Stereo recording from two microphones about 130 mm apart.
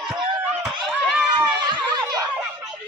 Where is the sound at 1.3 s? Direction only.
35° right (ahead or behind).